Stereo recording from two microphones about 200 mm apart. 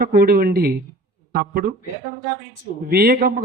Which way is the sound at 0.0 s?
50° right (ahead or behind).